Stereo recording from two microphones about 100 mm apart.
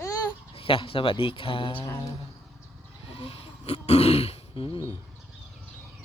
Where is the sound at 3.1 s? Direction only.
75° left (ahead or behind).